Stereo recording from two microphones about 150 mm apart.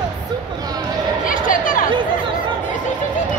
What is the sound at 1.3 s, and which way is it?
Speech, 65° left (ahead or behind).